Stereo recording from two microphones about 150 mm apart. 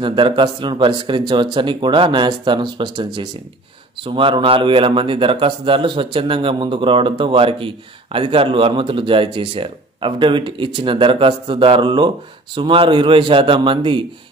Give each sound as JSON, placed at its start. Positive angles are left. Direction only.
{"t": 0.0, "sound": "speech", "side_deg": -35}